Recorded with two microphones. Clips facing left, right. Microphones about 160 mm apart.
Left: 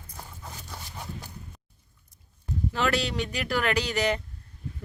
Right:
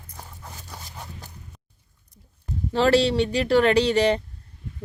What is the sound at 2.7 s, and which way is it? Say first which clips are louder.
Speech: right 9 dB; 30° right (ahead or behind).